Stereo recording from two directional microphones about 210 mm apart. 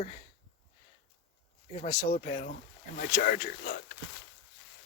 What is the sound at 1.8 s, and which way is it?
Speech, 35° left (ahead or behind).